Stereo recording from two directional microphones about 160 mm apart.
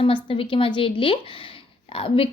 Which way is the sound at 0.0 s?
35° left (ahead or behind).